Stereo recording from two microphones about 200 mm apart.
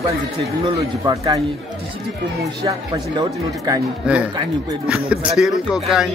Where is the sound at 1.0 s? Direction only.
20° right (ahead or behind).